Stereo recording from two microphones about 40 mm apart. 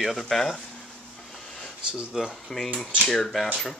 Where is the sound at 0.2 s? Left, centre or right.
Centre.